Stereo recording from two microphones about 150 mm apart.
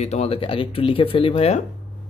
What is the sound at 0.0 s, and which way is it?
Speech, 45° left (ahead or behind).